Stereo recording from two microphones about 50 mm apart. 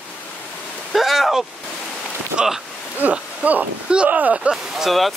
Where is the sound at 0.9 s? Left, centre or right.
Centre.